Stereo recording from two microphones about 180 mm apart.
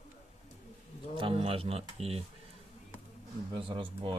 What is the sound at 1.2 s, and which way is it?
Speech, 30° right (ahead or behind).